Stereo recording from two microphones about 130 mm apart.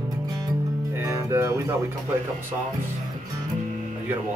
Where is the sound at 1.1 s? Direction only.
20° right (ahead or behind).